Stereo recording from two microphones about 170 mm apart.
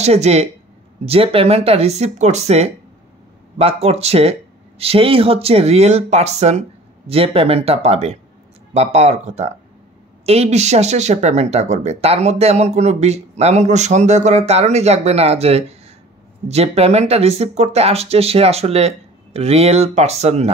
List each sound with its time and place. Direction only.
0.0 s speech: 40° right (ahead or behind)